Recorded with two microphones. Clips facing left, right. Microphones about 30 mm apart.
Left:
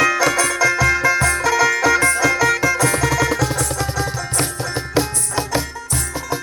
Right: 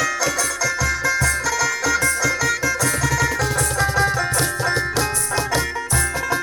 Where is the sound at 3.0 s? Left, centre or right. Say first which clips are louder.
Left 2 dB; left.